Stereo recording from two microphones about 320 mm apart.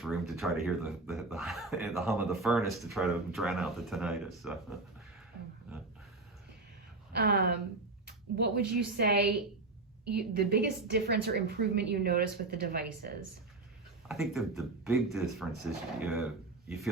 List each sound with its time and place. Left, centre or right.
0.0 s speech: centre
7.1 s a woman's voice: right
10.3 s a woman's voice: right
14.1 s speech: centre